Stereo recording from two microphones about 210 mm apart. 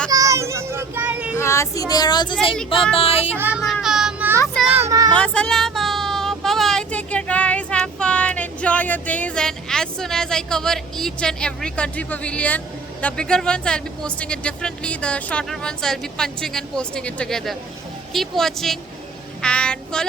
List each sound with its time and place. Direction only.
0.1 s a child's voice: 15° right (ahead or behind)
1.4 s speech: 15° left (ahead or behind)
3.3 s child singing: 5° right (ahead or behind)
4.9 s child singing: 15° right (ahead or behind)
5.1 s speech: 5° left (ahead or behind)